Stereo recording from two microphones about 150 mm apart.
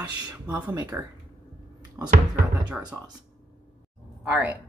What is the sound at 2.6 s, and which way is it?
Speech, 5° right (ahead or behind).